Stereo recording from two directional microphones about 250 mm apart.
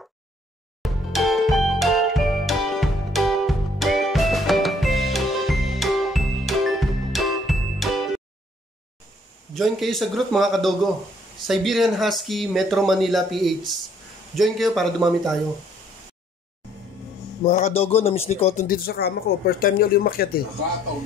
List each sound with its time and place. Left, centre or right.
0.8 s music: centre
9.5 s speech: centre
17.5 s speech: left